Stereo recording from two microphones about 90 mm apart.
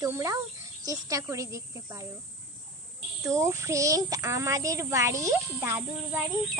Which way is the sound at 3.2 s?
35° right (ahead or behind).